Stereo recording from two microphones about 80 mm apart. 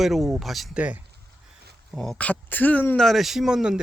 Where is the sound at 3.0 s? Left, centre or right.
Centre.